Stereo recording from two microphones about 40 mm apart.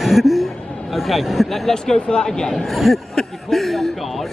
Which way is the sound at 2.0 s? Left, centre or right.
Centre.